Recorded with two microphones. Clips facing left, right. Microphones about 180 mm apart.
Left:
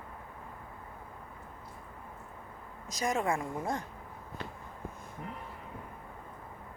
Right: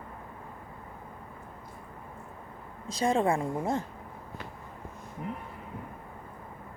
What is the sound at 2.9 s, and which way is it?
Speech, 30° right (ahead or behind).